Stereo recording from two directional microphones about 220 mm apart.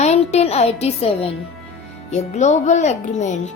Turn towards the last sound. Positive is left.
turn(degrees=30)  # may be behind; listen again after turning